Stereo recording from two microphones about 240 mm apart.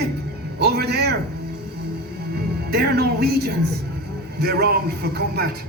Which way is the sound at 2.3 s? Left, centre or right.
Right.